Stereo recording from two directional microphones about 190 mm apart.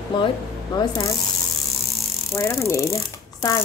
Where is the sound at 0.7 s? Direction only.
20° left (ahead or behind).